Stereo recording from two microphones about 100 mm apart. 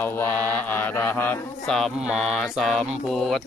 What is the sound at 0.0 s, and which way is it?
Mantra, 20° left (ahead or behind).